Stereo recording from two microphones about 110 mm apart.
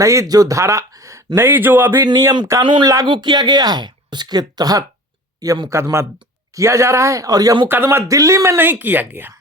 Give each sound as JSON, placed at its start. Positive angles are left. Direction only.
{"t": 0.0, "sound": "speech", "side_deg": -30}
{"t": 3.1, "sound": "speech", "side_deg": -40}
{"t": 7.7, "sound": "speech", "side_deg": -20}